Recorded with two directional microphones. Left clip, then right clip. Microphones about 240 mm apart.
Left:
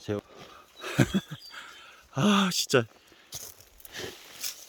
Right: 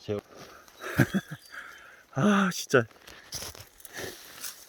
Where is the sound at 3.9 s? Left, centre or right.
Right.